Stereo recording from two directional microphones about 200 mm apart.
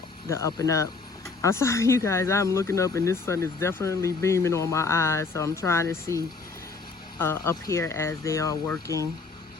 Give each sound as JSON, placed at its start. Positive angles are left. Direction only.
{"t": 0.3, "sound": "speech", "side_deg": 15}
{"t": 7.2, "sound": "speech", "side_deg": 10}